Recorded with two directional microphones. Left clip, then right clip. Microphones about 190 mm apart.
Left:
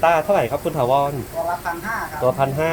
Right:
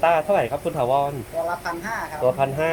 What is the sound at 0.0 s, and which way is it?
Speech, 5° left (ahead or behind).